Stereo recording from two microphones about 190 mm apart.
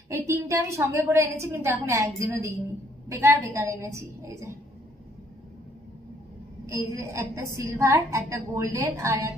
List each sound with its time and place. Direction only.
0.1 s a woman's voice: 15° right (ahead or behind)
6.6 s a woman's voice: 15° right (ahead or behind)